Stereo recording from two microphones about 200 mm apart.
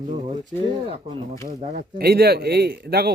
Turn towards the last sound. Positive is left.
turn(degrees=-50)  # may be behind; listen again after turning